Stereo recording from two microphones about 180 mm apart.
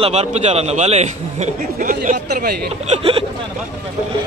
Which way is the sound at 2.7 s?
35° right (ahead or behind).